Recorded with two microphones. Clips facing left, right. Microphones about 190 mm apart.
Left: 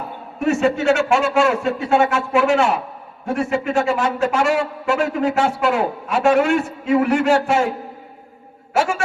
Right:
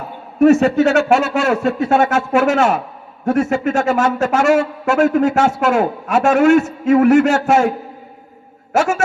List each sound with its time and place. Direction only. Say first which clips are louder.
0.3 s a man's voice: right 7 dB; 40° right (ahead or behind)
8.7 s a man's voice: right 4 dB; 45° right (ahead or behind)